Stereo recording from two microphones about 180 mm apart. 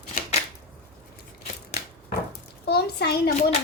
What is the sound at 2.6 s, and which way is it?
Speech, 65° left (ahead or behind).